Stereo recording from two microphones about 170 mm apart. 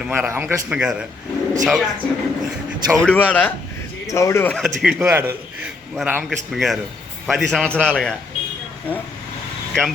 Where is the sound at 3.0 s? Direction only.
10° left (ahead or behind).